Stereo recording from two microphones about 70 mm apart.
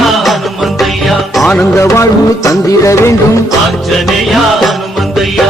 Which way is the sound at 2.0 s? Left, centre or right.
Left.